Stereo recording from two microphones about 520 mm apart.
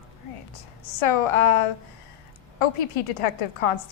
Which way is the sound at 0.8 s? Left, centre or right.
Left.